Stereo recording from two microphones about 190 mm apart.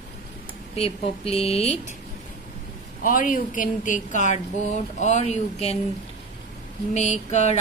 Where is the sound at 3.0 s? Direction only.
45° left (ahead or behind).